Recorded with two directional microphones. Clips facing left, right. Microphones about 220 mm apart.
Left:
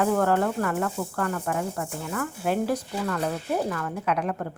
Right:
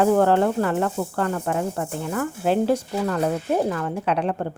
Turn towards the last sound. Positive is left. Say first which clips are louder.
# right 4 dB
turn(degrees=-30)  # may be behind; listen again after turning